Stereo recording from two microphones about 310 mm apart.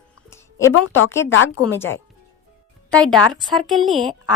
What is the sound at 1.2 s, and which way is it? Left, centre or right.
Speech, left.